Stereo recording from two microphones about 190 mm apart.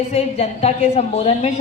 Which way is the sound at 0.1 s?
35° left (ahead or behind).